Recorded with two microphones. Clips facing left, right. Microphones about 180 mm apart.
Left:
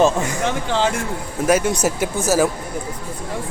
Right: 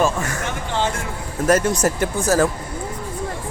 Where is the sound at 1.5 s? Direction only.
Centre (ahead or behind).